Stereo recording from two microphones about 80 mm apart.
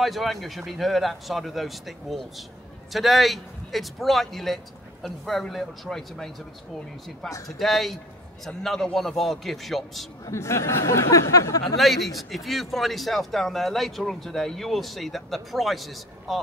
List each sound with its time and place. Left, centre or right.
0.0 s a man's voice: centre
7.4 s a man's voice: centre
10.2 s speech: left
11.7 s a man's voice: centre